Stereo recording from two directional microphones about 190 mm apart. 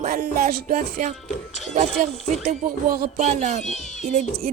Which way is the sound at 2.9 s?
50° right (ahead or behind).